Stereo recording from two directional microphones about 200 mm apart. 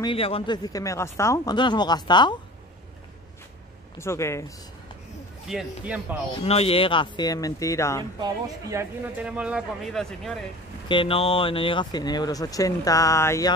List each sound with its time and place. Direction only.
0.0 s speech: 25° left (ahead or behind)
0.7 s speech: 15° left (ahead or behind)
4.0 s speech: 15° left (ahead or behind)
5.5 s speech: 5° right (ahead or behind)
6.4 s speech: 30° left (ahead or behind)
8.0 s speech: 20° right (ahead or behind)
9.2 s speech: 5° right (ahead or behind)
10.9 s speech: 25° left (ahead or behind)